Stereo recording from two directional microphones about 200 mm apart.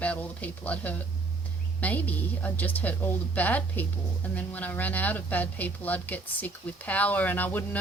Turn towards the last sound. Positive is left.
turn(degrees=10)  # may be behind; listen again after turning